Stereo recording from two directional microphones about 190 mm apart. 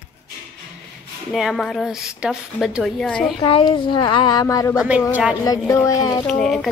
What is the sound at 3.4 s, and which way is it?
A woman's voice, 25° left (ahead or behind).